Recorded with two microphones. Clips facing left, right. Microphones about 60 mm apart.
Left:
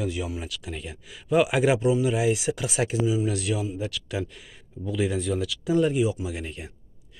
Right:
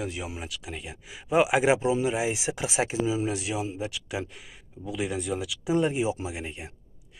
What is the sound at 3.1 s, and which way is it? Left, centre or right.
Speech, right.